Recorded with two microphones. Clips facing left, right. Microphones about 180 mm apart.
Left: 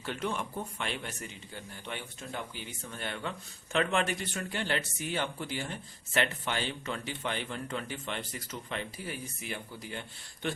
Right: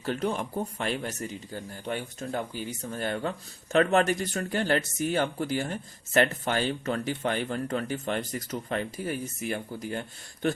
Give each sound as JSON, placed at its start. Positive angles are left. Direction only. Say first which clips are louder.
{"t": 0.0, "sound": "speech", "louder": "right 6 dB", "side_deg": -40}